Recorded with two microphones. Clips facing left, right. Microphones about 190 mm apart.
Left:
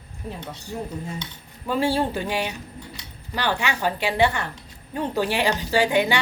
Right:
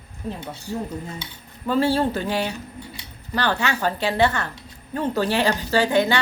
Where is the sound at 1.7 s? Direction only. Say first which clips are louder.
Right 2 dB; 15° left (ahead or behind).